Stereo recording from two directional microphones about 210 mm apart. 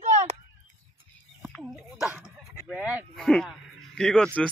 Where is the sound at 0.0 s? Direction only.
35° right (ahead or behind).